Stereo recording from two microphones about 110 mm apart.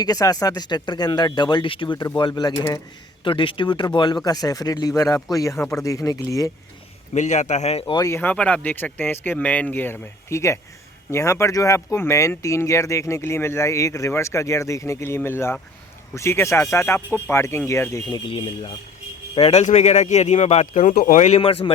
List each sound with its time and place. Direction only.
0.0 s speech: 35° left (ahead or behind)
3.2 s speech: 50° left (ahead or behind); by 6.5 s 30° left (ahead or behind)
7.1 s a man's voice: 90° left
8.0 s speech: 20° left (ahead or behind)
18.3 s speech: 55° left (ahead or behind)
19.4 s a man's voice: 70° left (ahead or behind); by 21.4 s 90° left
21.4 s speech: 55° left (ahead or behind)